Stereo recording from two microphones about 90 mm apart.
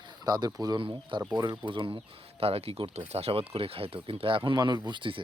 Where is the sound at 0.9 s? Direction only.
60° right (ahead or behind).